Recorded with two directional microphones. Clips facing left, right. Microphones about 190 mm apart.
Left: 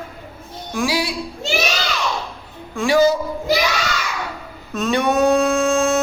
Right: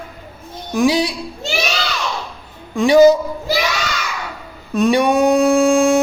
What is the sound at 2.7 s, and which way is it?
Speech, 20° right (ahead or behind).